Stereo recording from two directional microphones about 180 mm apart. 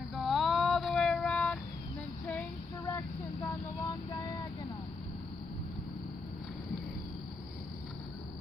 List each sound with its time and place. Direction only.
0.1 s vehicle: centre (ahead or behind)
2.2 s female singing: 10° left (ahead or behind)
3.4 s vehicle: 20° left (ahead or behind)